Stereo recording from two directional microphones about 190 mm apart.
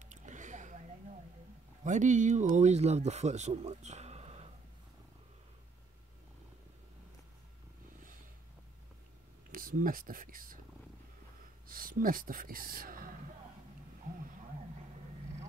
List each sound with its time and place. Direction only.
0.0 s a sound: 40° right (ahead or behind)
1.9 s speech: 40° right (ahead or behind)
9.5 s speech: 45° right (ahead or behind)
11.6 s speech: 50° right (ahead or behind)